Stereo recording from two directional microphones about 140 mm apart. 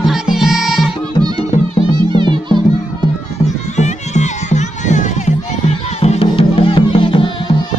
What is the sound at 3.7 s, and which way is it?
Music, 55° left (ahead or behind).